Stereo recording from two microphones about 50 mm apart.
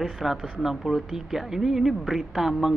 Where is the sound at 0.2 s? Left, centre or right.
Centre.